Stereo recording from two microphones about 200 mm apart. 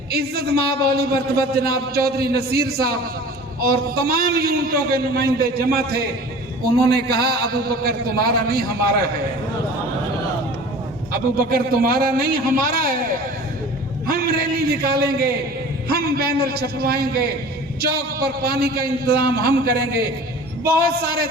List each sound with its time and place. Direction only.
0.1 s a man's voice: 50° right (ahead or behind)
11.4 s a man's voice: 50° right (ahead or behind)
14.1 s a sound: 50° right (ahead or behind)
15.9 s a man's voice: 50° right (ahead or behind)